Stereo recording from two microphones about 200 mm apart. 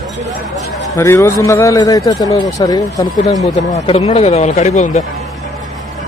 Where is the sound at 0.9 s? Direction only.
15° left (ahead or behind).